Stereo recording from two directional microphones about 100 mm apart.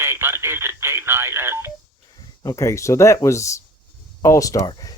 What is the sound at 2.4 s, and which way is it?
Speech, 30° left (ahead or behind).